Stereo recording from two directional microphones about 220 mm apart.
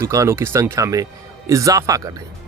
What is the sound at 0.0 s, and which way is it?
Speech, 15° right (ahead or behind).